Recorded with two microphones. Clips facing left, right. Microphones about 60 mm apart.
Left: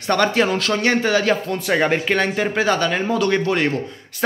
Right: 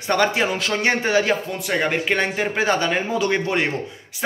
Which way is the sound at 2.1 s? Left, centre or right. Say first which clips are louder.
Left 2 dB; centre.